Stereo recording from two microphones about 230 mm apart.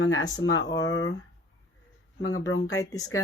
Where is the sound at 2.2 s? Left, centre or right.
Left.